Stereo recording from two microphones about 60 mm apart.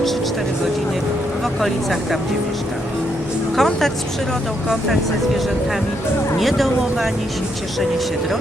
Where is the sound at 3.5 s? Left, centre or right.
Centre.